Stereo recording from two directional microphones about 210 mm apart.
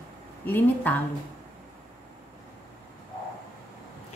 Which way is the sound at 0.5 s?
10° left (ahead or behind).